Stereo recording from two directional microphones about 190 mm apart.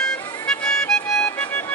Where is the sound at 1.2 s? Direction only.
10° left (ahead or behind).